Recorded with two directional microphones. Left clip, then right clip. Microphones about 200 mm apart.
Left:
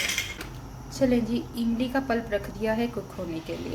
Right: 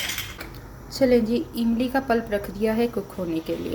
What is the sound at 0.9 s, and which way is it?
A woman's voice, 25° right (ahead or behind).